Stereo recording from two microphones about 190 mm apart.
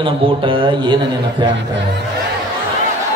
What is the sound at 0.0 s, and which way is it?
Speech, 25° right (ahead or behind).